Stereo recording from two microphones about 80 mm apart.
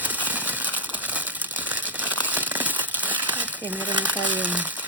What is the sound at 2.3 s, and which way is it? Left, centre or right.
Crumpling, right.